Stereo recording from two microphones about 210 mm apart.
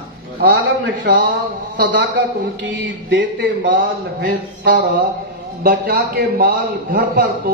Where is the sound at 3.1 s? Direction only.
50° right (ahead or behind).